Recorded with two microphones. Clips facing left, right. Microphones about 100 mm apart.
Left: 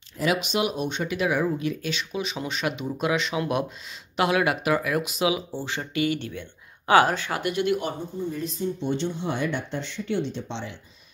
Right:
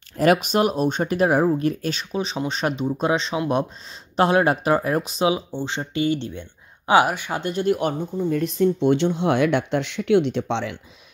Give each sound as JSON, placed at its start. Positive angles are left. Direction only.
{"t": 0.2, "sound": "speech", "side_deg": -50}
{"t": 7.6, "sound": "speech", "side_deg": -50}